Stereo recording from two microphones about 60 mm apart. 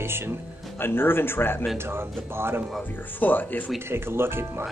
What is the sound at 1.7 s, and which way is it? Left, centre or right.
Speech, right.